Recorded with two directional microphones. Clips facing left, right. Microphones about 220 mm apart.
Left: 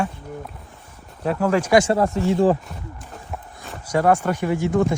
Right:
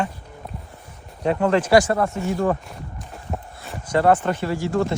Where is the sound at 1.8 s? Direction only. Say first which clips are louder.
Left 3 dB; 35° left (ahead or behind).